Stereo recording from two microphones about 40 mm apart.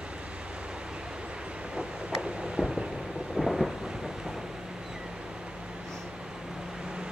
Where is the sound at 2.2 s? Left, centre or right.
Right.